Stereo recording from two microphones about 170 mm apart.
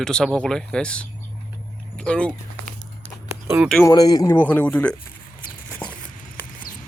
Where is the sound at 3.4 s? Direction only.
15° right (ahead or behind).